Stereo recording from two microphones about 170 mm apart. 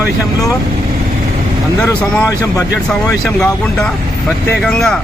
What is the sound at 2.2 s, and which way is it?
Speech, 20° left (ahead or behind).